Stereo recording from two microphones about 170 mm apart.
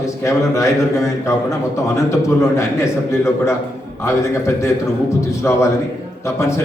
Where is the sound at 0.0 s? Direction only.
20° left (ahead or behind).